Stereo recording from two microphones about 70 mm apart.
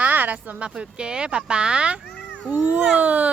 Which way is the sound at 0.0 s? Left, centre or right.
Right.